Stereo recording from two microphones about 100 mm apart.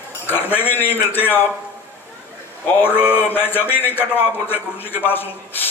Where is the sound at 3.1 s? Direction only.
20° left (ahead or behind).